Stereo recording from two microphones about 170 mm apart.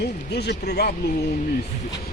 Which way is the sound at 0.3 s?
75° left (ahead or behind).